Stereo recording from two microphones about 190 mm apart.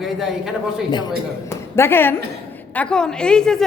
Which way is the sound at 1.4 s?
15° left (ahead or behind).